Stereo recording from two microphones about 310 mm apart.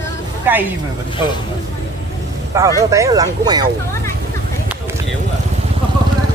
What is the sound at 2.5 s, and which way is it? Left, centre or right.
Speech, centre.